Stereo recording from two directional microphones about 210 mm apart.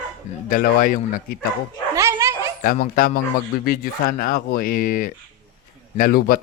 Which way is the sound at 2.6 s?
40° left (ahead or behind).